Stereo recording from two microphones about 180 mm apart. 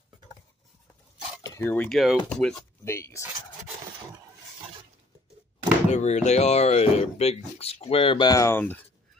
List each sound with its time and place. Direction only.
1.4 s cutlery: 15° left (ahead or behind)
1.9 s speech: centre (ahead or behind)
2.8 s speech: 15° left (ahead or behind)
3.2 s speech: 10° right (ahead or behind)
5.9 s speech: 40° left (ahead or behind); by 8.8 s 10° left (ahead or behind)